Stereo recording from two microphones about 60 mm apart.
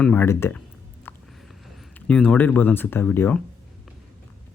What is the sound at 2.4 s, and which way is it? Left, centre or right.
Speech, left.